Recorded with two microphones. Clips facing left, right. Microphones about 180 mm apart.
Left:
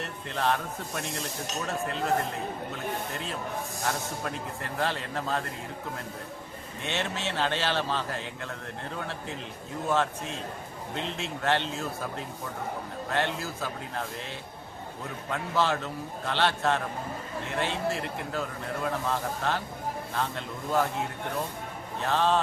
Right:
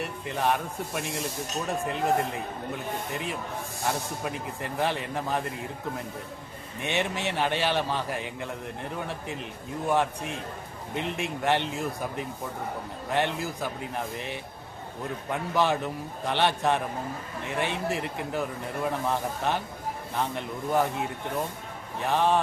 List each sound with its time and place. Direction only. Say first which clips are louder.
0.0 s speech: right 2 dB; 15° right (ahead or behind)
6.8 s speech: right 3 dB; 15° right (ahead or behind)
22.0 s speech: right 1 dB; 15° right (ahead or behind)